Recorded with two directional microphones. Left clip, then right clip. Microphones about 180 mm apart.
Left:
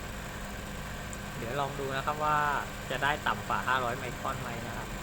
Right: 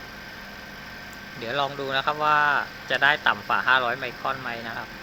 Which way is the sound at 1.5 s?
30° right (ahead or behind).